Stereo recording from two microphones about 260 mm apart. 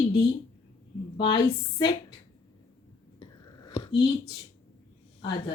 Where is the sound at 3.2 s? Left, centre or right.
Left.